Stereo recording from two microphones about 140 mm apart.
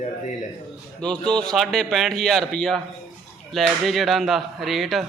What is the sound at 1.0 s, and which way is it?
Speech, 5° left (ahead or behind).